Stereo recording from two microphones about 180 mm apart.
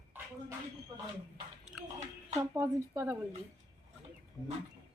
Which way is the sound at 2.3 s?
15° right (ahead or behind).